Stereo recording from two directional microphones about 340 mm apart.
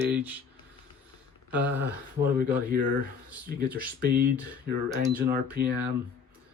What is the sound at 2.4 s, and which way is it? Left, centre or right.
Speech, right.